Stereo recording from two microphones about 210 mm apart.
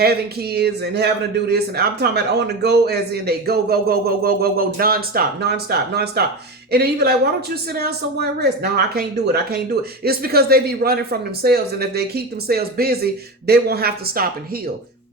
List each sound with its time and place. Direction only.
0.0 s a man's voice: 50° right (ahead or behind)